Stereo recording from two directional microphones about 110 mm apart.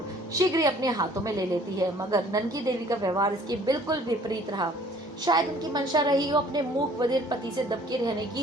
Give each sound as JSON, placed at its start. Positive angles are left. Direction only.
{"t": 0.3, "sound": "a woman's voice", "side_deg": -35}